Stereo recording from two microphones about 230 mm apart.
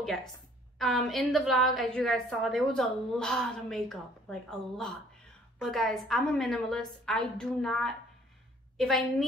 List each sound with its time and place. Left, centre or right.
0.0 s a woman's voice: centre